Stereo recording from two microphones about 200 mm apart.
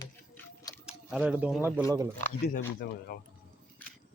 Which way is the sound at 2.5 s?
45° left (ahead or behind).